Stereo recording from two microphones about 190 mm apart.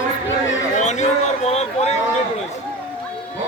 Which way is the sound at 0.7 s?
40° left (ahead or behind).